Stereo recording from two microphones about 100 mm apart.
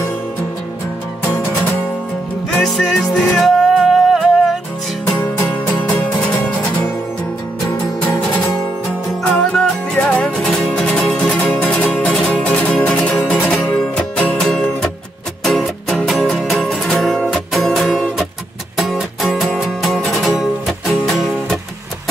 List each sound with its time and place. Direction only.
2.5 s music: 5° left (ahead or behind)
5.1 s music: 15° left (ahead or behind)
13.5 s music: 5° left (ahead or behind)